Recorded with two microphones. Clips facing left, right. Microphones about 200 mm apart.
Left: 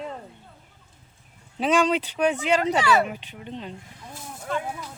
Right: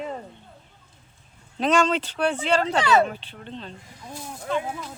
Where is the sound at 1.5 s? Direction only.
10° left (ahead or behind).